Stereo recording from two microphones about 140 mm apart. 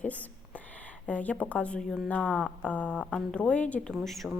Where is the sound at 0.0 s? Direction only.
10° left (ahead or behind).